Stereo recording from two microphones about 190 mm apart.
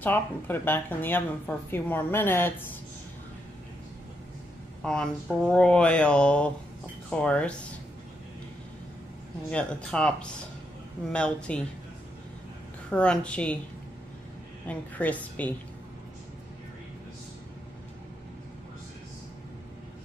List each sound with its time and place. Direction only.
0.0 s speech: 10° left (ahead or behind)
4.8 s speech: 5° left (ahead or behind)
9.5 s speech: 5° left (ahead or behind)
12.9 s speech: 5° left (ahead or behind)
14.7 s speech: 10° left (ahead or behind)